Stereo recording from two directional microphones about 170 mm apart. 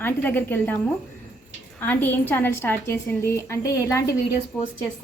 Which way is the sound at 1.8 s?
10° left (ahead or behind).